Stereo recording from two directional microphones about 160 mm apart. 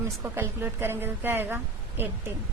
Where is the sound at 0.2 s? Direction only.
15° right (ahead or behind).